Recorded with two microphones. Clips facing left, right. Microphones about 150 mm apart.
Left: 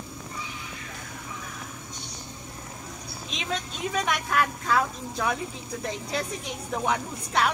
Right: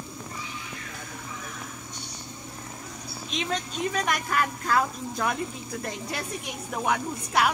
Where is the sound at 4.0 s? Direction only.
Centre (ahead or behind).